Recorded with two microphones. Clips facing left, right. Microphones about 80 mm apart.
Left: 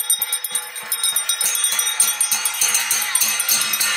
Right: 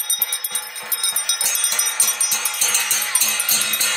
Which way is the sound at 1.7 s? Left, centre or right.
Centre.